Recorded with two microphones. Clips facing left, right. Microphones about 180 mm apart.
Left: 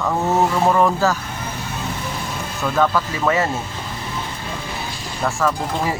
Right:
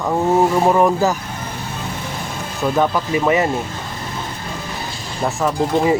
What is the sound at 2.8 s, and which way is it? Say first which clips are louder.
Speech: right 1 dB; 15° right (ahead or behind).